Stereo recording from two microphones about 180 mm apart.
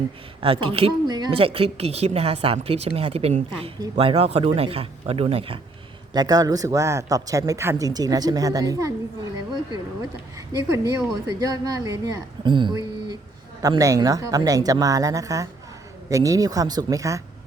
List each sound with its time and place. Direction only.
0.4 s speech: 30° right (ahead or behind)
6.1 s a woman's voice: 20° right (ahead or behind)
10.3 s a woman's voice: 20° right (ahead or behind)